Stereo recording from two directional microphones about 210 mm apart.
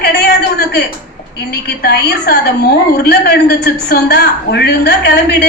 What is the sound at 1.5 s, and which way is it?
A woman's voice, 50° left (ahead or behind).